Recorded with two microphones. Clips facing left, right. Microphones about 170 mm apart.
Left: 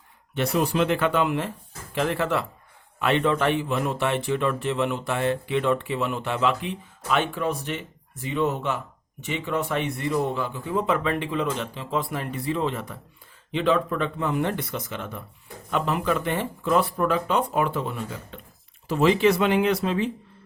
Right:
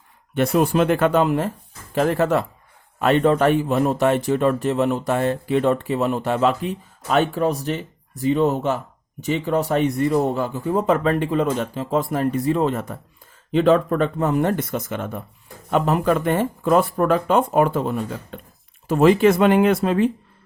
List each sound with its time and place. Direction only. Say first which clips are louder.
0.3 s a man's voice: right 5 dB; 50° right (ahead or behind)